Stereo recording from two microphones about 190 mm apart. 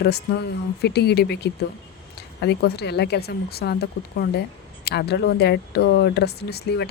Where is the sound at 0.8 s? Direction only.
60° left (ahead or behind).